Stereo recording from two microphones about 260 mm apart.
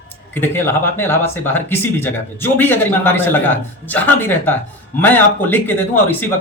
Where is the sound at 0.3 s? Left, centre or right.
Centre.